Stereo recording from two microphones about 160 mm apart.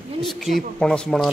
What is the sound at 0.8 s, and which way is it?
Speech, 5° left (ahead or behind).